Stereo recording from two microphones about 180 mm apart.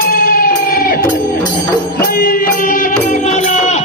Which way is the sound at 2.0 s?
55° left (ahead or behind).